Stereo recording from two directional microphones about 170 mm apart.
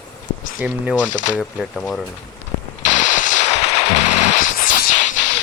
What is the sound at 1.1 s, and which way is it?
Speech, 50° left (ahead or behind).